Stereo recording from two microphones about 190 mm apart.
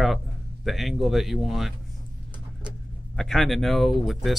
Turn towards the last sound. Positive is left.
turn(degrees=0)  # may be behind; listen again after turning